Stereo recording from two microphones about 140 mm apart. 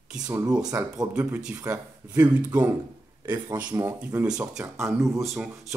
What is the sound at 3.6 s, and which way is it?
Speech, 30° right (ahead or behind).